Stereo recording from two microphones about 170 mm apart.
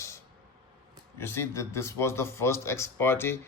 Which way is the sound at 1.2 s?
15° left (ahead or behind).